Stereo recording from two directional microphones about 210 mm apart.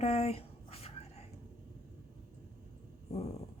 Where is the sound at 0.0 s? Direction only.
30° left (ahead or behind).